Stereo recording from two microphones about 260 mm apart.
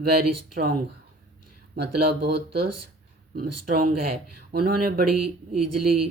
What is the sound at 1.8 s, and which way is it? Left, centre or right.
Speech, right.